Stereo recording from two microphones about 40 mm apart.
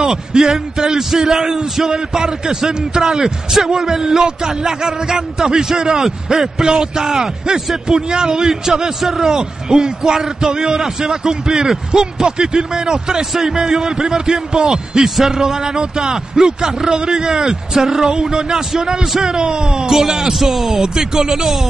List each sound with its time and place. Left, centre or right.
0.0 s a man's voice: centre
14.7 s a man's voice: centre